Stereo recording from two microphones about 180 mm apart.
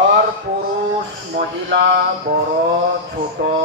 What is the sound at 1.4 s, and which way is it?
Speech, 70° right (ahead or behind).